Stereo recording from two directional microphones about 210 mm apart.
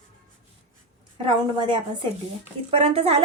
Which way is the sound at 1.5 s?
20° right (ahead or behind).